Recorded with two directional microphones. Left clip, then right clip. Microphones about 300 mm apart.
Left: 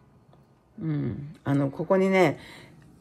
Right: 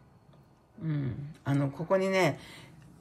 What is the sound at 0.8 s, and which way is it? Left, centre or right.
Speech, centre.